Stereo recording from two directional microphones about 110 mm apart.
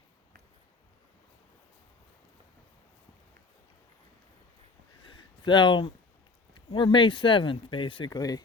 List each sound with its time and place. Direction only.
5.0 s a sound: 45° left (ahead or behind)
6.7 s speech: 50° left (ahead or behind)
8.1 s speech: 35° left (ahead or behind)